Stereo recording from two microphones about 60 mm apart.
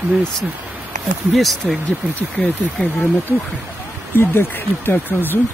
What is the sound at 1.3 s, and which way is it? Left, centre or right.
Speech, centre.